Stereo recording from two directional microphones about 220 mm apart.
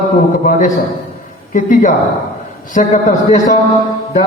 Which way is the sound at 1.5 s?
35° left (ahead or behind).